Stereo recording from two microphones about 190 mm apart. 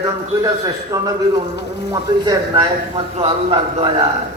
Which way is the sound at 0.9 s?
20° right (ahead or behind).